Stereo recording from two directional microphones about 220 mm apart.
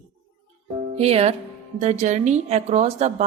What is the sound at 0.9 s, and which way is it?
A woman's voice, 25° right (ahead or behind).